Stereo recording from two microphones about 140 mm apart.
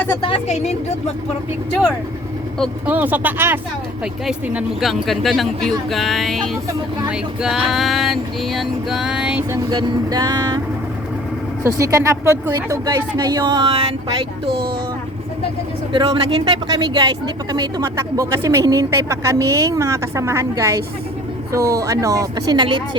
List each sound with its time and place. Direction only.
0.2 s speech: 40° left (ahead or behind)
0.5 s speech: 50° left (ahead or behind)
2.8 s speech: 10° right (ahead or behind)
9.5 s speech: 30° right (ahead or behind)
11.6 s speech: 20° right (ahead or behind); by 14.5 s 40° right (ahead or behind)
15.9 s speech: 40° right (ahead or behind)